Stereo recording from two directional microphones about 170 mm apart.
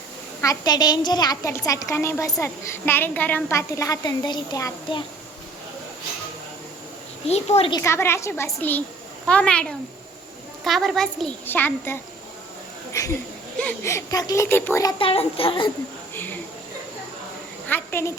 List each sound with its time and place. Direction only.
0.4 s speech: 25° left (ahead or behind)
7.3 s a child's voice: 40° left (ahead or behind)
7.7 s a child's voice: 15° left (ahead or behind)
14.9 s a child's voice: 35° left (ahead or behind)
16.1 s a sound: 10° left (ahead or behind)
17.7 s a sound: 10° left (ahead or behind)